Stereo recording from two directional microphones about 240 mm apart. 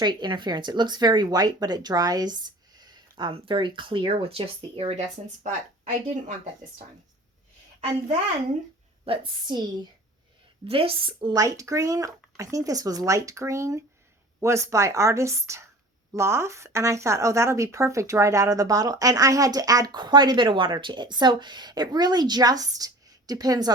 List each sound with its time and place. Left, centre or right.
0.0 s speech: centre
9.0 s a woman's voice: centre
10.7 s speech: right